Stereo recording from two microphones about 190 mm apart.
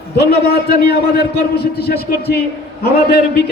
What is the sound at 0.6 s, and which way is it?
A man's voice, 55° left (ahead or behind).